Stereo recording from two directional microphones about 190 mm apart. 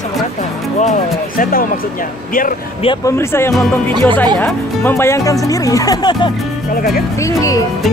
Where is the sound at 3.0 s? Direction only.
15° left (ahead or behind).